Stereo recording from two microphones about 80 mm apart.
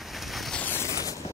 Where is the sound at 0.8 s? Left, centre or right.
Left.